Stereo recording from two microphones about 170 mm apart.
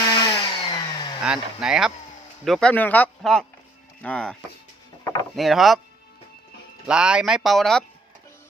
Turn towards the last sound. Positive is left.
turn(degrees=0)  # may be behind; listen again after turning